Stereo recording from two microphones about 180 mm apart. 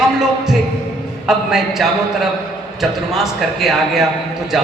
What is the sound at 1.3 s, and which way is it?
A man's voice, centre (ahead or behind).